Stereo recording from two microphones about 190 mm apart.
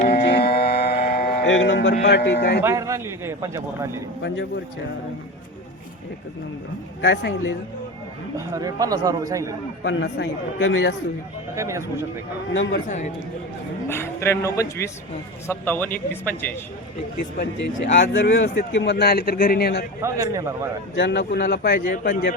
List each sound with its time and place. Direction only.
0.0 s a sound: 40° left (ahead or behind)
0.3 s a sound: 55° left (ahead or behind)
1.5 s speech: 75° left (ahead or behind)
2.6 s a man's voice: 15° right (ahead or behind)
7.0 s speech: 70° left (ahead or behind)
8.4 s a man's voice: 20° right (ahead or behind)
9.8 s a man's voice: 70° left (ahead or behind)
11.5 s a man's voice: 15° right (ahead or behind)
12.7 s a man's voice: 40° left (ahead or behind)
13.8 s speech: 15° left (ahead or behind)
17.9 s a man's voice: 70° left (ahead or behind)
20.0 s a man's voice: 15° right (ahead or behind)
20.9 s a man's voice: 65° left (ahead or behind)